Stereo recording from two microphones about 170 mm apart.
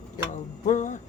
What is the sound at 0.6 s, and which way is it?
Speech, 45° left (ahead or behind).